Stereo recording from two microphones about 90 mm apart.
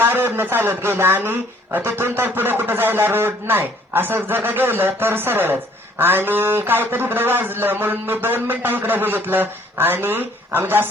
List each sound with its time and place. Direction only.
0.0 s speech: 25° right (ahead or behind)